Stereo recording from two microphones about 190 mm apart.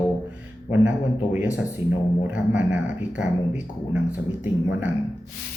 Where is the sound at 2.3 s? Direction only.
5° right (ahead or behind).